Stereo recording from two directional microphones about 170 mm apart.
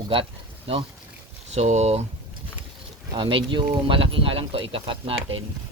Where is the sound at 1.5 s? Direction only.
40° right (ahead or behind).